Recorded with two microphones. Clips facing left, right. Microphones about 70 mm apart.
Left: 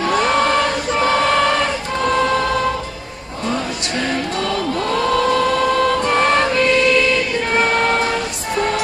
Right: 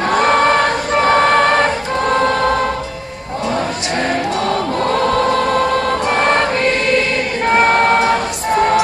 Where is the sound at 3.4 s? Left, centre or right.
Right.